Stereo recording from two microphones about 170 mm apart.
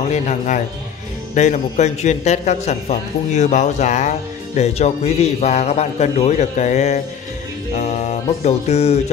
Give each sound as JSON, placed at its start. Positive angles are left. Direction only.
{"t": 0.1, "sound": "a man's voice", "side_deg": 45}